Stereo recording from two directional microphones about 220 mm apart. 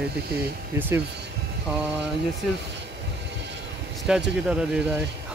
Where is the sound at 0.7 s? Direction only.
10° right (ahead or behind).